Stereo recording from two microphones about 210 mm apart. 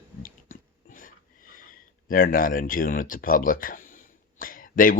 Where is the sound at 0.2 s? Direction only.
40° left (ahead or behind).